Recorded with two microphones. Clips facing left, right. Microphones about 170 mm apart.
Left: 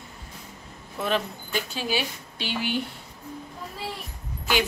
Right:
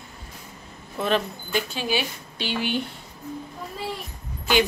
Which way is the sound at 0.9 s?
5° left (ahead or behind).